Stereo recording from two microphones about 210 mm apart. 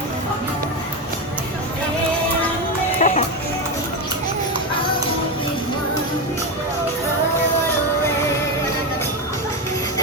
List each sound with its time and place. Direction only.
3.0 s music: 35° left (ahead or behind)